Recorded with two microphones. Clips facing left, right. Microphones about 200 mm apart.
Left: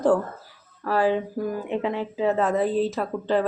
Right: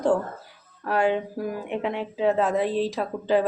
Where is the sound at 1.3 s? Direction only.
15° right (ahead or behind).